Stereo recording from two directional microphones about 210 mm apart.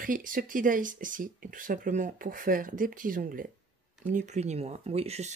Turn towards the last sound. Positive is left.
turn(degrees=-30)  # may be behind; listen again after turning